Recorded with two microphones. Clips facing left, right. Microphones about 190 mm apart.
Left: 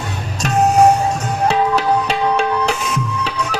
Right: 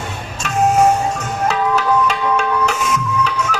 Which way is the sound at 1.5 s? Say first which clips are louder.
Left 1 dB; 35° left (ahead or behind).